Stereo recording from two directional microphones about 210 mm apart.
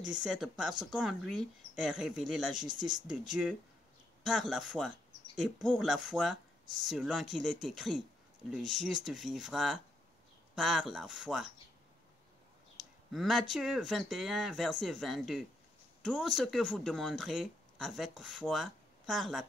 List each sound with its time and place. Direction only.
0.2 s speech: centre (ahead or behind)
2.7 s speech: 20° right (ahead or behind)
3.1 s speech: 5° right (ahead or behind)
13.1 s speech: centre (ahead or behind)